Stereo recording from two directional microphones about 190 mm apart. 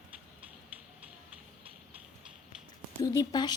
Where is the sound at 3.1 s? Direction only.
20° left (ahead or behind).